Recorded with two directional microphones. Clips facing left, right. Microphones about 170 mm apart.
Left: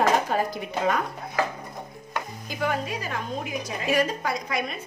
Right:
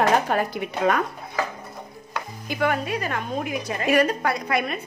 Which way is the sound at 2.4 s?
65° right (ahead or behind).